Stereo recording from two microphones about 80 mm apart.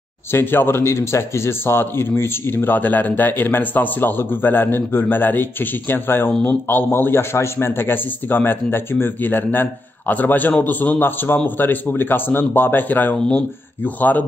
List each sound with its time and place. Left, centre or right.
0.3 s a man's voice: left